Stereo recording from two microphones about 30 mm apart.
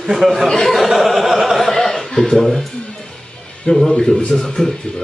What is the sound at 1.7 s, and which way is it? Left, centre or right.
Chuckle, centre.